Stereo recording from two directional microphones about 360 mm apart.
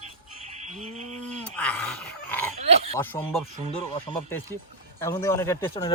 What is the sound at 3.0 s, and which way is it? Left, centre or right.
Speech, centre.